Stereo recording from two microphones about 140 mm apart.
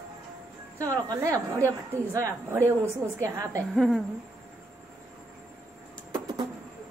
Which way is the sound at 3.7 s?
Centre (ahead or behind).